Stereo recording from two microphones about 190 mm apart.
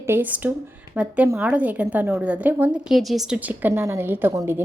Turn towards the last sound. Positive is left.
turn(degrees=-15)  # may be behind; listen again after turning